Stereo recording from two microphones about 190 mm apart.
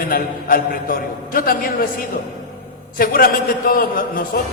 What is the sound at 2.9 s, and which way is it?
Speech, 50° left (ahead or behind).